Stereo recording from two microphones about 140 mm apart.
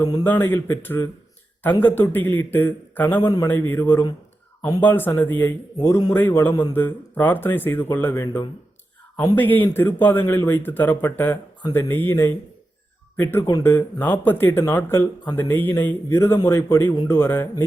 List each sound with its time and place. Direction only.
0.3 s speech: 15° left (ahead or behind)
3.2 s a man's voice: 25° left (ahead or behind)
3.5 s speech: 15° left (ahead or behind)
5.8 s a man's voice: 25° left (ahead or behind)
6.1 s speech: 15° left (ahead or behind)
9.2 s a man's voice: 15° left (ahead or behind)